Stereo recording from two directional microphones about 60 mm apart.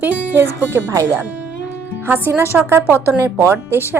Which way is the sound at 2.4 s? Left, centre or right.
Right.